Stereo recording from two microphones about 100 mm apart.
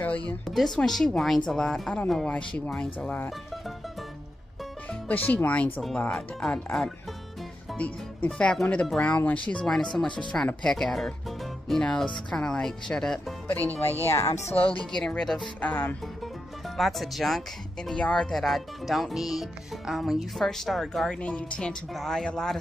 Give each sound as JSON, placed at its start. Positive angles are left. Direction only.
{"t": 0.5, "sound": "a woman's voice", "side_deg": 0}
{"t": 5.0, "sound": "a woman's voice", "side_deg": 15}
{"t": 7.7, "sound": "music", "side_deg": 15}
{"t": 8.3, "sound": "speech", "side_deg": 5}
{"t": 13.8, "sound": "a woman's voice", "side_deg": 25}
{"t": 14.4, "sound": "speech", "side_deg": 80}
{"t": 15.0, "sound": "a woman's voice", "side_deg": 5}
{"t": 15.6, "sound": "speech", "side_deg": 20}
{"t": 16.6, "sound": "a woman's voice", "side_deg": 0}